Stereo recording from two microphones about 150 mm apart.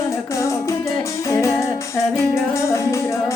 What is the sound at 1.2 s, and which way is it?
Music, 20° left (ahead or behind).